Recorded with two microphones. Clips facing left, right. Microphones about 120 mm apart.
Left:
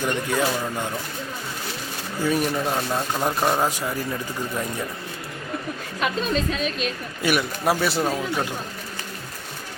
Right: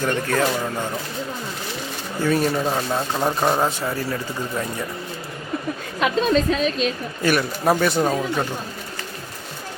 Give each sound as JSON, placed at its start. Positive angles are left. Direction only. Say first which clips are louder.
{"t": 0.0, "sound": "speech", "louder": "right 2 dB", "side_deg": 15}
{"t": 2.2, "sound": "speech", "louder": "right 3 dB", "side_deg": 10}
{"t": 2.6, "sound": "speech", "louder": "right 2 dB", "side_deg": -5}
{"t": 3.6, "sound": "speech", "louder": "right 2 dB", "side_deg": 10}
{"t": 6.0, "sound": "a woman's voice", "louder": "right 5 dB", "side_deg": -40}
{"t": 7.2, "sound": "speech", "louder": "right 2 dB", "side_deg": 10}
{"t": 8.0, "sound": "speech", "louder": "right 3 dB", "side_deg": -5}